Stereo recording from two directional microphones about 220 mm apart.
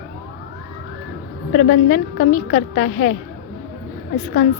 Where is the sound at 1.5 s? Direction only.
50° left (ahead or behind).